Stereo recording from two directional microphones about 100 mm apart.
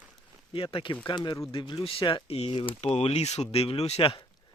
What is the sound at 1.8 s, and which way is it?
Speech, 65° left (ahead or behind).